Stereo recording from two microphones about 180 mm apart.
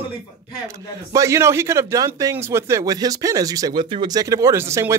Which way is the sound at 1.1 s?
15° right (ahead or behind).